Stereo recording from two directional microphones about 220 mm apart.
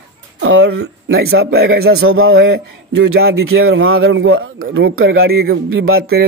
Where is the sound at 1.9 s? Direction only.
70° right (ahead or behind).